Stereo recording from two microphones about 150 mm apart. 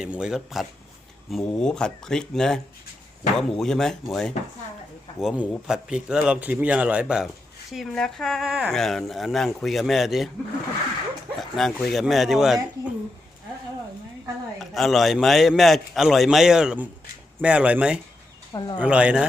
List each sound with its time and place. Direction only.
0.0 s a man's voice: 5° right (ahead or behind)
11.3 s speech: centre (ahead or behind)
14.6 s a man's voice: centre (ahead or behind)
18.5 s speech: 30° left (ahead or behind)
18.8 s a man's voice: 10° right (ahead or behind)